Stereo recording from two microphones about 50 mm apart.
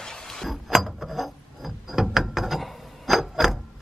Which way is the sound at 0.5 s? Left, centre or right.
Centre.